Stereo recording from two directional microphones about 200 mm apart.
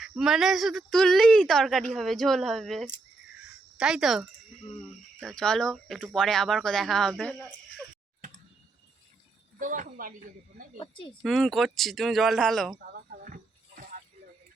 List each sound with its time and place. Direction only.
0.0 s speech: centre (ahead or behind)
9.6 s speech: 40° right (ahead or behind)
10.8 s a woman's voice: 25° left (ahead or behind)
11.2 s speech: centre (ahead or behind)
12.9 s a sound: 45° right (ahead or behind)